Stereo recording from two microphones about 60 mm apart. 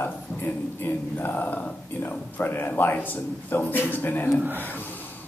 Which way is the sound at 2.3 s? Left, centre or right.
Left.